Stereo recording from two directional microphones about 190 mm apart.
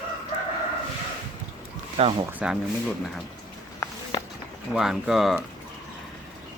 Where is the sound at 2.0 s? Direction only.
30° right (ahead or behind).